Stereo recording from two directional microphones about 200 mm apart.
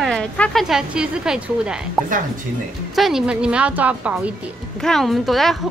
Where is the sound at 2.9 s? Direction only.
Centre (ahead or behind).